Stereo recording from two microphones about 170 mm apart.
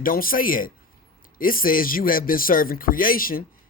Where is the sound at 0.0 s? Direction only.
55° left (ahead or behind).